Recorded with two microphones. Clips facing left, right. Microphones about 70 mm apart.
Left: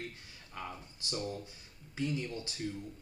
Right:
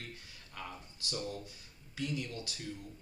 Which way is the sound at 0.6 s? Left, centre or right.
Left.